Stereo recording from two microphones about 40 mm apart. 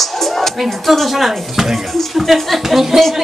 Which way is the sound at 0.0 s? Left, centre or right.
Centre.